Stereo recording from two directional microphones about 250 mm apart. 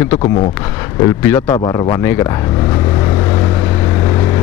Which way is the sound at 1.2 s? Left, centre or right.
Centre.